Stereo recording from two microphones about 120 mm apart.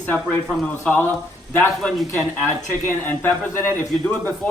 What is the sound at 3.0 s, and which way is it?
A man's voice, 15° left (ahead or behind).